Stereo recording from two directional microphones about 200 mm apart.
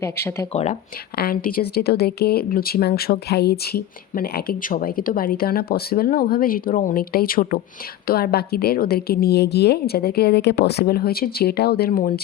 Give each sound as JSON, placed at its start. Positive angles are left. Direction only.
{"t": 0.0, "sound": "speech", "side_deg": 10}
{"t": 0.5, "sound": "speech", "side_deg": 35}
{"t": 1.1, "sound": "speech", "side_deg": 50}